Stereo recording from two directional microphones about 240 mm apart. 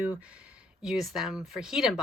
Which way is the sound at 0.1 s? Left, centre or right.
Centre.